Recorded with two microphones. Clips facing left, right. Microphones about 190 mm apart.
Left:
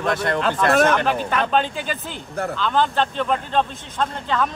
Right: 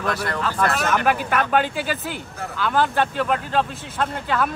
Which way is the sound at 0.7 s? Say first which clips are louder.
Left 7 dB; 55° left (ahead or behind).